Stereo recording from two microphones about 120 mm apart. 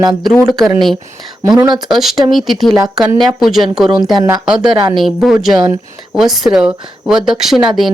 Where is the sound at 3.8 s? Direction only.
35° right (ahead or behind).